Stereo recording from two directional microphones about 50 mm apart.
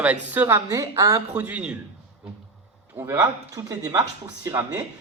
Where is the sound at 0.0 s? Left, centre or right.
Right.